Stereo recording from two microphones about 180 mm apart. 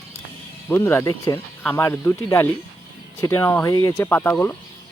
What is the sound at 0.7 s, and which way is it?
Speech, 10° left (ahead or behind).